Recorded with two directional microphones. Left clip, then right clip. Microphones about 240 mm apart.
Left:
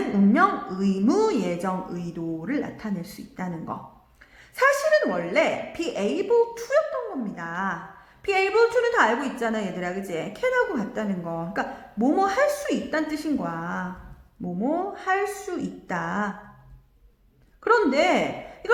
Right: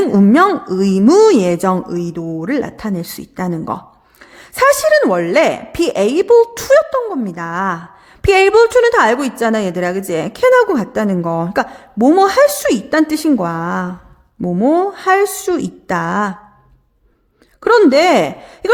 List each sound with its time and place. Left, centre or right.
0.3 s a woman's voice: right
17.6 s a woman's voice: right